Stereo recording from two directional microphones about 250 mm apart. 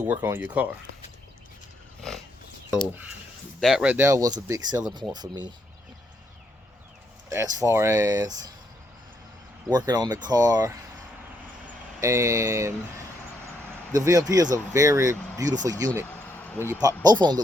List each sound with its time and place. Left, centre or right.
0.0 s speech: centre
2.6 s speech: centre
7.3 s speech: centre
9.6 s speech: centre
11.9 s speech: centre
13.9 s speech: centre
16.0 s a sound: centre
17.0 s speech: centre